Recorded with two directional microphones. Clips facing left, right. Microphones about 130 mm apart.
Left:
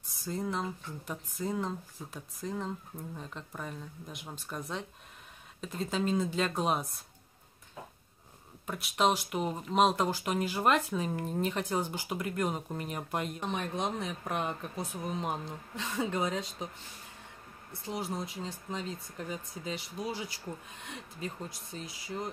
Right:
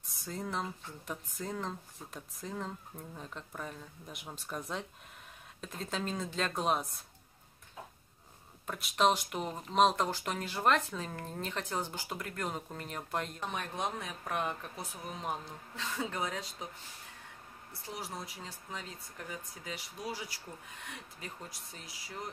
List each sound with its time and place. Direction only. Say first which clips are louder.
0.1 s speech: left 4 dB; centre (ahead or behind)
8.6 s speech: even; 5° left (ahead or behind); by 16.6 s 20° left (ahead or behind)
17.9 s speech: left 7 dB; 20° left (ahead or behind)